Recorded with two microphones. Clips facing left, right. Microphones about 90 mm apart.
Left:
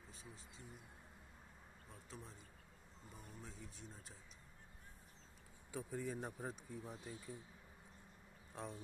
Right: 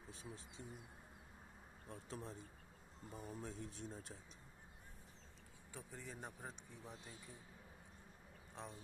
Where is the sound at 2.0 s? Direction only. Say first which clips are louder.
Right 5 dB; 45° right (ahead or behind).